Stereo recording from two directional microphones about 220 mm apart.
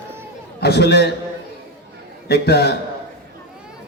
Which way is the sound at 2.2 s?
45° left (ahead or behind).